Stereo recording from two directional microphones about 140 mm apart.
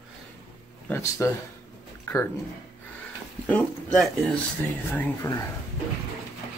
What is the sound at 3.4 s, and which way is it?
Speech, 5° left (ahead or behind).